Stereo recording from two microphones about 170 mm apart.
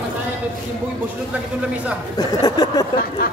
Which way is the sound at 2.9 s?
60° left (ahead or behind).